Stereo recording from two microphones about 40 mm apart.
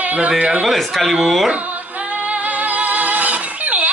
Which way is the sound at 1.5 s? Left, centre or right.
Right.